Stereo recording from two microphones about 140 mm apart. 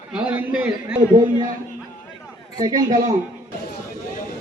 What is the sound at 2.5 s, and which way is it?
Speech, 30° right (ahead or behind).